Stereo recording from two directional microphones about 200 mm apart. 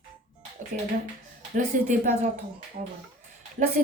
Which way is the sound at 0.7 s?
45° right (ahead or behind).